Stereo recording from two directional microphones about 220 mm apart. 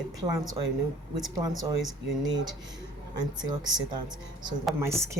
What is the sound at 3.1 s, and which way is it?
A woman's voice, 20° right (ahead or behind).